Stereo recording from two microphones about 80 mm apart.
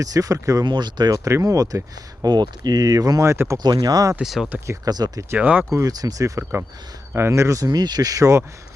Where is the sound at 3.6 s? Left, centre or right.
Right.